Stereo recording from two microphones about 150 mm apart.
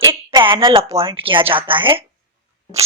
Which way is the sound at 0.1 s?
35° right (ahead or behind).